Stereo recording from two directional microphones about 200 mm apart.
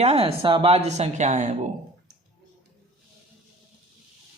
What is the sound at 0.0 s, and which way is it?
A woman's voice, 30° right (ahead or behind).